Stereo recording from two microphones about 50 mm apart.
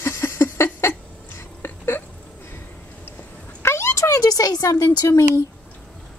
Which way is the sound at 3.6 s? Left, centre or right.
Left.